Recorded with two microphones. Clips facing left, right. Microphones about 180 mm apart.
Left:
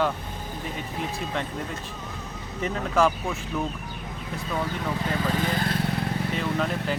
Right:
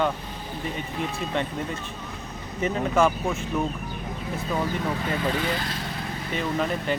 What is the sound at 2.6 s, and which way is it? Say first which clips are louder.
Speech: right 1 dB; centre (ahead or behind).